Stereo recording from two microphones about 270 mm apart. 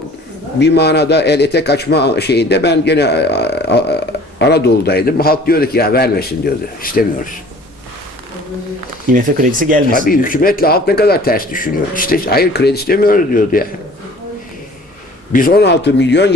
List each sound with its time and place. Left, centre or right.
0.6 s a man's voice: left
9.1 s speech: right
10.1 s a man's voice: left
15.3 s a man's voice: left